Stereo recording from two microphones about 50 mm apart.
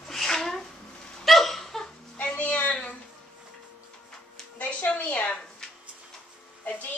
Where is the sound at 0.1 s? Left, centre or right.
Centre.